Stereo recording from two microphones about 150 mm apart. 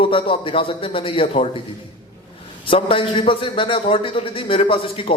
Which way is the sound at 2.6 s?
35° left (ahead or behind).